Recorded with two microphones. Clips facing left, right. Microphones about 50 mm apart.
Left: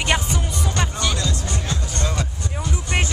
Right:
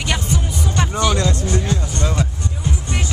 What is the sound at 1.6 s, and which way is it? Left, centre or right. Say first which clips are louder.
Music: right 4 dB; right.